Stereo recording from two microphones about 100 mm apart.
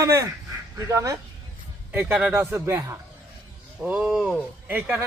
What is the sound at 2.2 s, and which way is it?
Speech, 10° right (ahead or behind).